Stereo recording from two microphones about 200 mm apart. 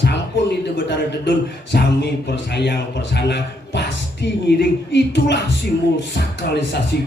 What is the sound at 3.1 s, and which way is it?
Speech, 60° left (ahead or behind).